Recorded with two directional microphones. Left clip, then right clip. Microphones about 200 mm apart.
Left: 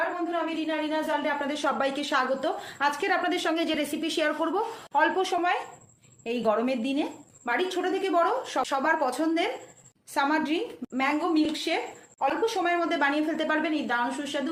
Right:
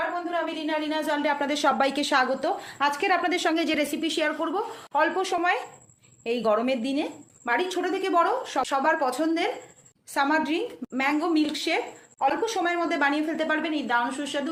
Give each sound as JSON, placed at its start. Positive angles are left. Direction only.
{"t": 0.9, "sound": "a woman's voice", "side_deg": -50}
{"t": 2.4, "sound": "a woman's voice", "side_deg": -25}
{"t": 4.0, "sound": "a woman's voice", "side_deg": -10}